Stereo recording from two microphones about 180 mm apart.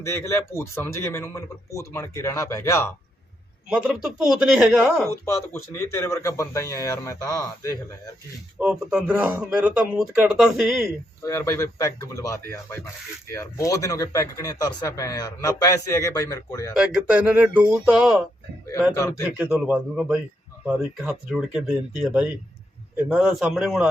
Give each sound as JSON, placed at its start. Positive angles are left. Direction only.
{"t": 0.0, "sound": "speech", "side_deg": 15}
{"t": 3.7, "sound": "speech", "side_deg": -5}
{"t": 5.2, "sound": "speech", "side_deg": 15}
{"t": 8.5, "sound": "speech", "side_deg": -5}
{"t": 11.2, "sound": "speech", "side_deg": 15}
{"t": 16.7, "sound": "speech", "side_deg": -5}